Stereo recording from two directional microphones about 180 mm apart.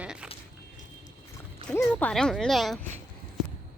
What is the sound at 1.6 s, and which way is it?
Speech, 15° left (ahead or behind).